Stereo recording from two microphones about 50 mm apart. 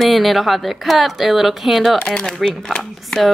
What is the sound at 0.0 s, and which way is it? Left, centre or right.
A woman's voice, centre.